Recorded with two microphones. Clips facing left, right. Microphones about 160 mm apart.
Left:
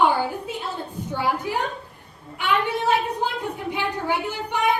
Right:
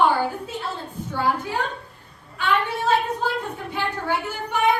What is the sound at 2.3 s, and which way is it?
A child's voice, 15° left (ahead or behind).